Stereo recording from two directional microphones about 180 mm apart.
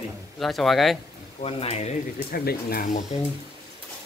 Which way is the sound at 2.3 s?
60° left (ahead or behind).